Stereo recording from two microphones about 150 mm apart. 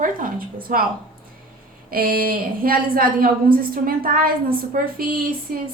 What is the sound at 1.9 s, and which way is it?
A woman's voice, 75° right (ahead or behind).